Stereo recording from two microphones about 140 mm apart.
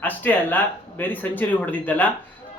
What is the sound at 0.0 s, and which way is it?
A man's voice, 10° left (ahead or behind).